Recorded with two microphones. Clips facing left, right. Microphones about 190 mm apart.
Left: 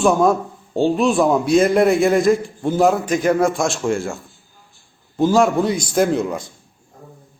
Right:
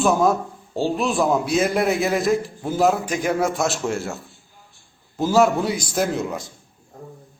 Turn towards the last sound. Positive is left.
turn(degrees=0)  # may be behind; listen again after turning